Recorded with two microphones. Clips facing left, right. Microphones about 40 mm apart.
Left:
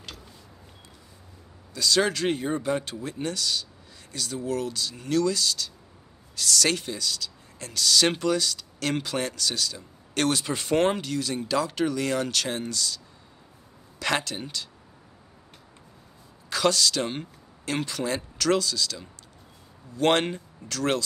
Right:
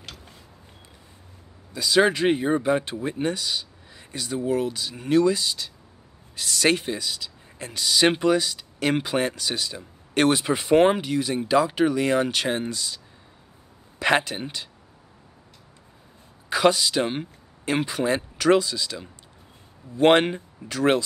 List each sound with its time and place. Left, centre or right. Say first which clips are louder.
1.7 s speech: right 4 dB; centre
16.4 s speech: right 3 dB; centre